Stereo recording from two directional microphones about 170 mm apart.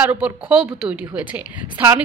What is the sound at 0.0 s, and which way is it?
A woman's voice, 5° right (ahead or behind).